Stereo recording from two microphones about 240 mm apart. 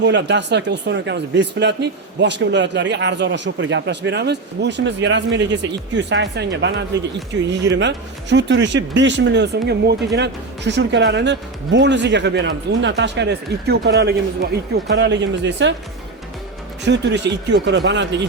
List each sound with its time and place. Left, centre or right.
0.0 s speech: right
16.8 s speech: right